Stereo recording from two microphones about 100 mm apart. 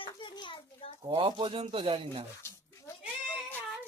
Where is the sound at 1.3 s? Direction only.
55° right (ahead or behind).